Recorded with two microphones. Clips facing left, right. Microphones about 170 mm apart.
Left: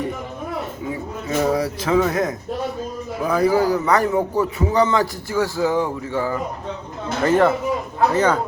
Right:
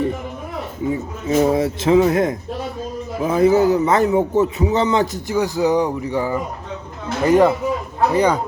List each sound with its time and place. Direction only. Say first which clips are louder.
1.3 s a man's voice: right 4 dB; 25° right (ahead or behind)